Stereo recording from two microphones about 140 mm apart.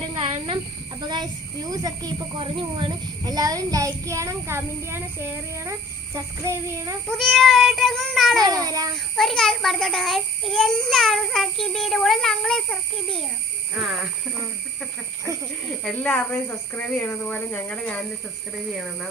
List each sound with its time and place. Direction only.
0.2 s snake: 40° right (ahead or behind)
1.0 s a child's voice: 30° right (ahead or behind)
7.1 s child singing: 5° left (ahead or behind)
8.4 s a child's voice: 25° right (ahead or behind)
9.1 s a child's voice: centre (ahead or behind)
15.8 s speech: 5° left (ahead or behind)